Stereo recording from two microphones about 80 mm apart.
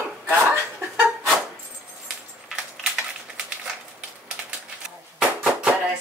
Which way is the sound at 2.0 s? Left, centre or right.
Centre.